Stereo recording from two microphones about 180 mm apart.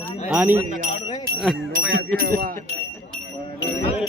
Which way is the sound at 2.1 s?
55° right (ahead or behind).